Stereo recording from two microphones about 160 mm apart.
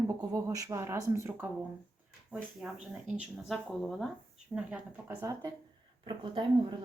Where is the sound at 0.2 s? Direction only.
20° right (ahead or behind).